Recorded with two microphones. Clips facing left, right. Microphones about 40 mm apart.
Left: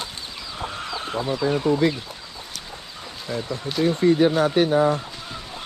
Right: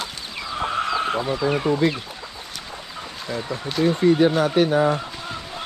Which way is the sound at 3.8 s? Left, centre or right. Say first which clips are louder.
Right 1 dB; centre.